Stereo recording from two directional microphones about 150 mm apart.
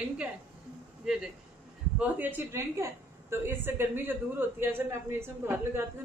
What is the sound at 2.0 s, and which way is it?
Speech, 10° right (ahead or behind).